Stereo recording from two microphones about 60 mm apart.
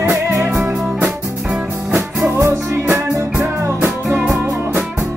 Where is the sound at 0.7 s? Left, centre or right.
Centre.